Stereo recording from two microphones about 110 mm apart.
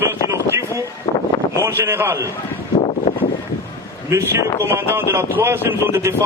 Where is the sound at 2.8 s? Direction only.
75° left (ahead or behind).